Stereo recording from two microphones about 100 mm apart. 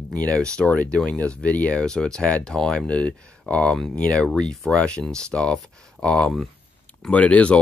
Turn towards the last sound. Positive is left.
turn(degrees=15)  # may be behind; listen again after turning